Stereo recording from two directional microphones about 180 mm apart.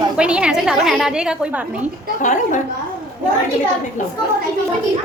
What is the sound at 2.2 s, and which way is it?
Speech, 45° left (ahead or behind).